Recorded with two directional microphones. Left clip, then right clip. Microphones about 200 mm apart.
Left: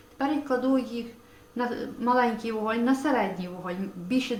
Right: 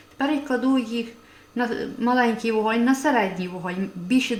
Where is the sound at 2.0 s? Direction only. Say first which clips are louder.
Right 3 dB; 55° right (ahead or behind).